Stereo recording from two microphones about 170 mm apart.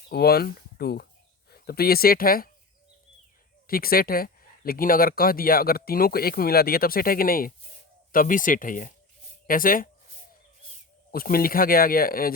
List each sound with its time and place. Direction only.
0.1 s speech: 65° left (ahead or behind)
3.7 s speech: 60° left (ahead or behind)
11.1 s speech: 60° left (ahead or behind)